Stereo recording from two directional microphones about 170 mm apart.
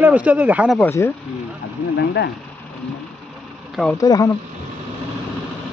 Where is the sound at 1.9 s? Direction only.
90° left.